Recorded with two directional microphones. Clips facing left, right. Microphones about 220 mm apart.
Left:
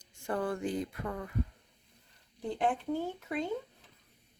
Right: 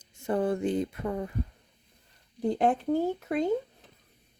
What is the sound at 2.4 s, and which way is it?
Speech, 40° right (ahead or behind).